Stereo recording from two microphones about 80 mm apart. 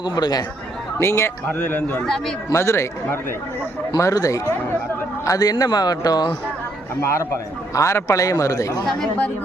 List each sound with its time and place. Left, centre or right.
0.0 s speech: left
0.9 s a man's voice: left
1.5 s speech: left
2.0 s a man's voice: centre
2.5 s a man's voice: left
7.0 s a man's voice: left